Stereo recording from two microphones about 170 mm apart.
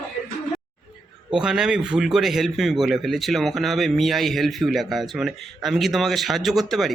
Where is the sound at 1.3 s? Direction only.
5° right (ahead or behind).